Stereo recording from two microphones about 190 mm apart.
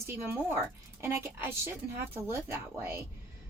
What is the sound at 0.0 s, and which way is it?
A woman's voice, 10° right (ahead or behind).